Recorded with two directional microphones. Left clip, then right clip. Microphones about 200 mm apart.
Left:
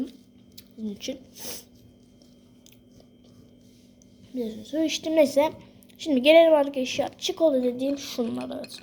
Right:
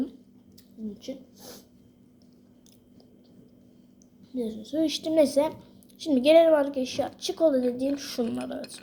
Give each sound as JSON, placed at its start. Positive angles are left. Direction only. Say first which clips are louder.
{"t": 0.9, "sound": "speech", "louder": "left 5 dB", "side_deg": 40}
{"t": 4.4, "sound": "a woman's voice", "louder": "even", "side_deg": 0}